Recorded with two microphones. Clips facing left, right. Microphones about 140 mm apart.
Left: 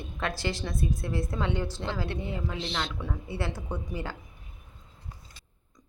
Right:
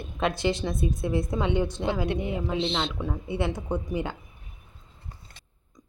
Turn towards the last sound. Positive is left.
turn(degrees=-20)  # may be behind; listen again after turning